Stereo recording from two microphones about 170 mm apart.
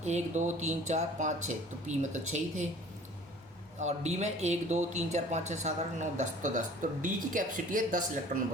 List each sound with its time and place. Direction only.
0.0 s speech: 45° right (ahead or behind)
3.8 s speech: 40° right (ahead or behind)